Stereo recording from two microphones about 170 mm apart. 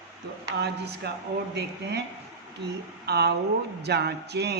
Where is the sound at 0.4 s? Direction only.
80° right.